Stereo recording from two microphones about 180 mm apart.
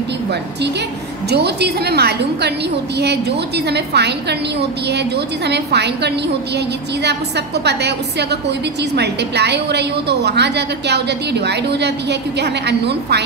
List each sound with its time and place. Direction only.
0.3 s a woman's voice: 70° right (ahead or behind)